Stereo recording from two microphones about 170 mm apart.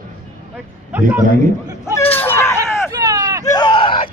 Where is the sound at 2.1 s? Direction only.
10° left (ahead or behind).